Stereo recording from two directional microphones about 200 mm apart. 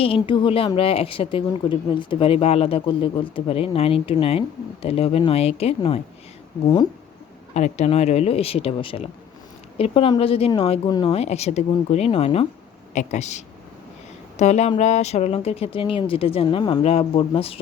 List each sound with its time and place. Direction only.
0.0 s a woman's voice: 25° left (ahead or behind)
7.5 s a woman's voice: 35° left (ahead or behind)